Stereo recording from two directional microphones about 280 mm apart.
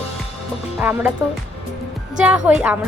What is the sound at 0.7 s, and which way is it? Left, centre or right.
Speech, centre.